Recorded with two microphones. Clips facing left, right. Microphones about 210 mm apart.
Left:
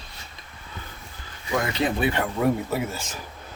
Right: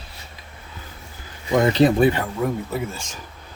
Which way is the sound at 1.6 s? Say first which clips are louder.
Right 10 dB; 35° right (ahead or behind).